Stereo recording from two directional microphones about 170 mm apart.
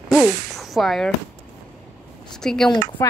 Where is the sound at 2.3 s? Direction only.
5° left (ahead or behind).